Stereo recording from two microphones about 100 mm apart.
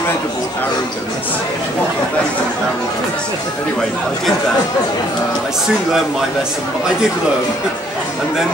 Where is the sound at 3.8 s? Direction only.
5° left (ahead or behind).